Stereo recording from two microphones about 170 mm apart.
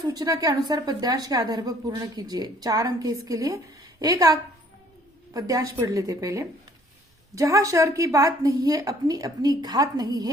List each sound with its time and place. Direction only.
0.0 s a woman's voice: 25° right (ahead or behind)